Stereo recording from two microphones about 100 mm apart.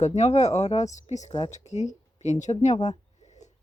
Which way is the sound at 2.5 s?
65° left (ahead or behind).